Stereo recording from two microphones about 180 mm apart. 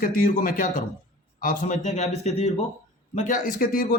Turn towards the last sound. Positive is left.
turn(degrees=55)  # may be behind; listen again after turning